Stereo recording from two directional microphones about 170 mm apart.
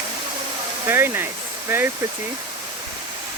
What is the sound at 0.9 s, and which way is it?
Speech, 15° right (ahead or behind).